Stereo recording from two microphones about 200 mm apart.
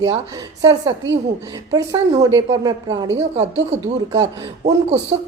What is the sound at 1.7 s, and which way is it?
A woman's voice, 20° right (ahead or behind).